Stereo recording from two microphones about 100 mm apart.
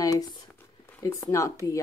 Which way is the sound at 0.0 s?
40° left (ahead or behind).